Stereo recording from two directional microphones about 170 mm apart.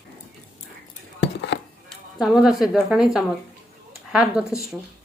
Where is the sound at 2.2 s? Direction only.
Centre (ahead or behind).